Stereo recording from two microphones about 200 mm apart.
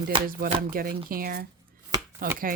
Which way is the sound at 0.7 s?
45° right (ahead or behind).